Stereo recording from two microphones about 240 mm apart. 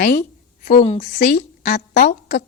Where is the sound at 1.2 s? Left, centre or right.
Left.